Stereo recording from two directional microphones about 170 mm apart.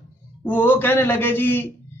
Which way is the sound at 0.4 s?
10° left (ahead or behind).